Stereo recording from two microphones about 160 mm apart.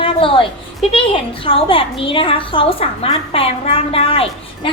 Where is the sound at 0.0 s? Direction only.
35° left (ahead or behind).